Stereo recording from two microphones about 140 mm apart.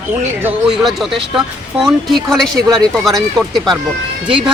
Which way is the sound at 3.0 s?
Centre (ahead or behind).